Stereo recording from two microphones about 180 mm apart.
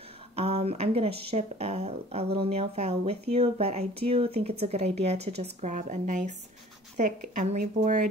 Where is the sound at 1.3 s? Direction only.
35° right (ahead or behind).